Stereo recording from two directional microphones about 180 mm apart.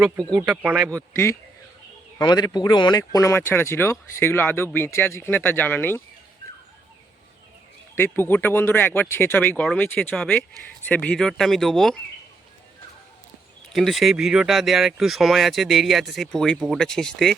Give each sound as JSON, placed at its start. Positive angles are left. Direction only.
{"t": 0.3, "sound": "speech", "side_deg": -10}
{"t": 1.1, "sound": "speech", "side_deg": 15}
{"t": 7.9, "sound": "speech", "side_deg": 10}
{"t": 13.7, "sound": "speech", "side_deg": 0}